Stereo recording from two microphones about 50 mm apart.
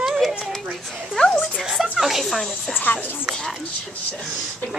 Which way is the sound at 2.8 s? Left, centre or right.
Left.